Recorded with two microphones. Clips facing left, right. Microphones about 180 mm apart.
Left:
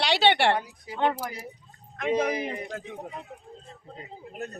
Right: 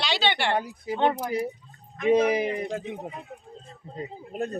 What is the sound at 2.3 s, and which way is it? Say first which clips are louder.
Speech: right 5 dB; 25° right (ahead or behind).